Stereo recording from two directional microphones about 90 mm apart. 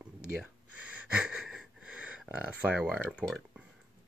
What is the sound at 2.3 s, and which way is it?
Speech, 15° right (ahead or behind).